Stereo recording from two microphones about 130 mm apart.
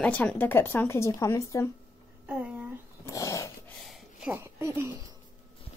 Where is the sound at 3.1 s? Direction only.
25° left (ahead or behind).